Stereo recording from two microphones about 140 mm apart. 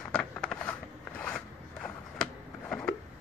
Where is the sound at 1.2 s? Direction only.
5° left (ahead or behind).